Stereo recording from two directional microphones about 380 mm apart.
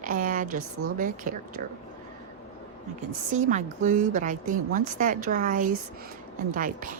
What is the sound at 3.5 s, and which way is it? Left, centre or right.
A woman's voice, centre.